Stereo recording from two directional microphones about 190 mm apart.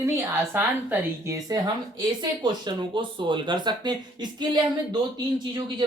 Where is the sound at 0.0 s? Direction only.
10° right (ahead or behind).